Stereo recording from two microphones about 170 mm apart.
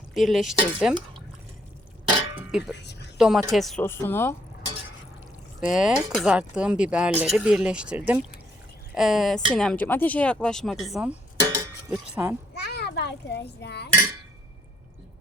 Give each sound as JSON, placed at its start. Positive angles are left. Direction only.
{"t": 0.1, "sound": "speech", "side_deg": 0}
{"t": 2.3, "sound": "clang", "side_deg": -5}
{"t": 2.7, "sound": "a sound", "side_deg": 85}
{"t": 3.2, "sound": "speech", "side_deg": -5}
{"t": 3.8, "sound": "speech", "side_deg": 15}
{"t": 5.7, "sound": "speech", "side_deg": -5}
{"t": 11.3, "sound": "a sound", "side_deg": -20}
{"t": 12.1, "sound": "speech", "side_deg": -10}
{"t": 12.5, "sound": "children playing", "side_deg": 75}